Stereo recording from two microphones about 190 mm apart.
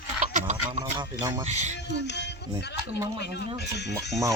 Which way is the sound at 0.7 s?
35° right (ahead or behind).